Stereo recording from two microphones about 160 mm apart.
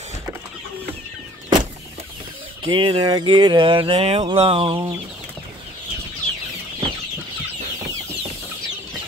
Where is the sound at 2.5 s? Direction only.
30° right (ahead or behind).